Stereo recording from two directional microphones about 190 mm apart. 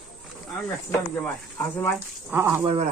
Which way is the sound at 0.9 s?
10° left (ahead or behind).